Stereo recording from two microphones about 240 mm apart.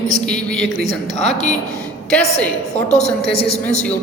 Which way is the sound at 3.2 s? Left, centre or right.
Left.